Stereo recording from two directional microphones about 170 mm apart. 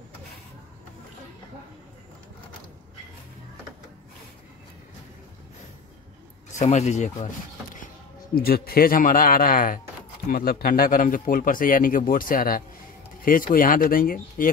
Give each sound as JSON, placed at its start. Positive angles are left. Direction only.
{"t": 6.5, "sound": "speech", "side_deg": 45}
{"t": 8.4, "sound": "speech", "side_deg": 60}